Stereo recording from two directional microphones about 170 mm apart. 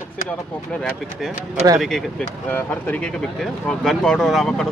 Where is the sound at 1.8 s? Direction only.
Centre (ahead or behind).